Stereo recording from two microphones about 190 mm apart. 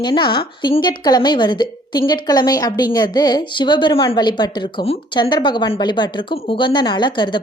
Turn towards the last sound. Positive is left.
turn(degrees=25)  # may be behind; listen again after turning